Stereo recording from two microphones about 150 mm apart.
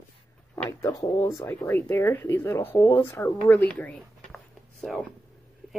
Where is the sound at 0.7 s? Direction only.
20° left (ahead or behind).